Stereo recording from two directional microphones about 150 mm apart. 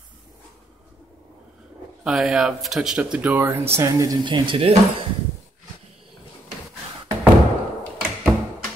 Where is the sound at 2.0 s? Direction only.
5° right (ahead or behind); by 4.2 s 20° right (ahead or behind).